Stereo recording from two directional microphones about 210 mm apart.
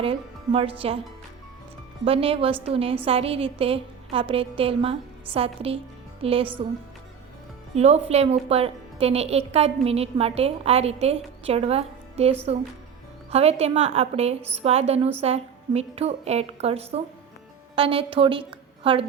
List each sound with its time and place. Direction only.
0.0 s a woman's voice: 25° right (ahead or behind)
2.0 s a woman's voice: 25° right (ahead or behind)
7.8 s a woman's voice: 30° right (ahead or behind)